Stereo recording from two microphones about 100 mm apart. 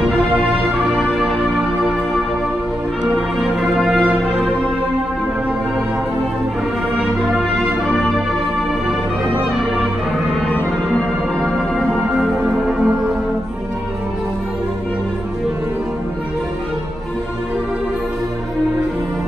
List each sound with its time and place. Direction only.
3.7 s music: 5° right (ahead or behind)
11.4 s music: centre (ahead or behind)
12.1 s music: 10° right (ahead or behind)